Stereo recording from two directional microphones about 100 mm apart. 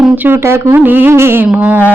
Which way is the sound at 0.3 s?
25° right (ahead or behind).